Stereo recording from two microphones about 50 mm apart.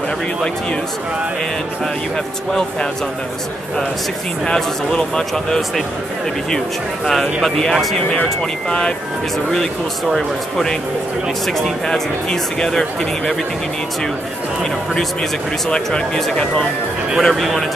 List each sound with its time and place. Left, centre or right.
4.5 s speech: centre
7.4 s speech: centre
8.1 s speech: centre
10.1 s speech: centre
17.2 s speech: centre